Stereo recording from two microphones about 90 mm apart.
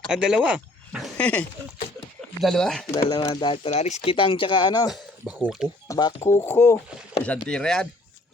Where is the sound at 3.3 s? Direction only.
70° left (ahead or behind); by 4.9 s 50° left (ahead or behind).